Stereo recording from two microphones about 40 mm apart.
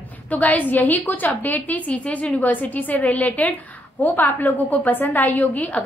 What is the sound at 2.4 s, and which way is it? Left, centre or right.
A woman's voice, left.